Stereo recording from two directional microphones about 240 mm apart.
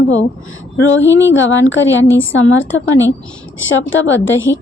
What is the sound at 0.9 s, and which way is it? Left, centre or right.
Speech, left.